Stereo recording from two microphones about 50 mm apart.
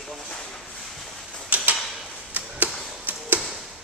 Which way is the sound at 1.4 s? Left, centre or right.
Right.